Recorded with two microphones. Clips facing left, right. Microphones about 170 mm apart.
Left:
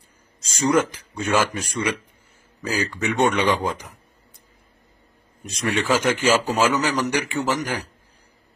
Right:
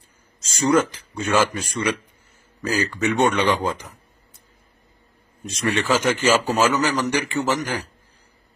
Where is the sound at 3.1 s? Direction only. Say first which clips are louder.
Even; 10° left (ahead or behind).